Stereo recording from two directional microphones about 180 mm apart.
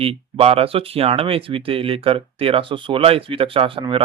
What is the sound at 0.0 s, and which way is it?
Speech, 30° right (ahead or behind).